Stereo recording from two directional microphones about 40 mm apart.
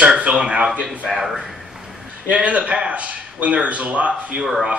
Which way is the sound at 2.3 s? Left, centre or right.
Right.